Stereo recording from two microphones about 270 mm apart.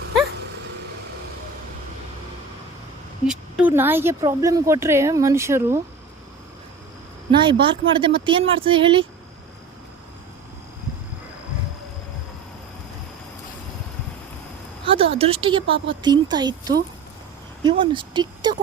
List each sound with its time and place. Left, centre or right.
3.2 s a woman's voice: centre
7.3 s a woman's voice: centre
14.8 s a sound: right
16.0 s a woman's voice: centre